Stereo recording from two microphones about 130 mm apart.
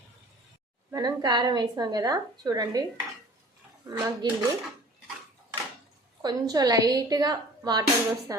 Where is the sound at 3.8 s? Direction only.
20° right (ahead or behind).